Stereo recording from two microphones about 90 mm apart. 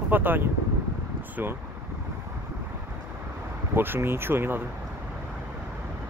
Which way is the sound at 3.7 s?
25° right (ahead or behind).